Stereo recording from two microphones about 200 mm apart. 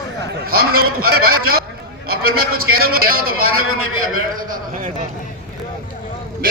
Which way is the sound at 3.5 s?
90° right.